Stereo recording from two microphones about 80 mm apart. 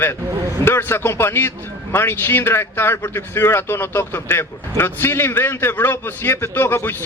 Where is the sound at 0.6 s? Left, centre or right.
Left.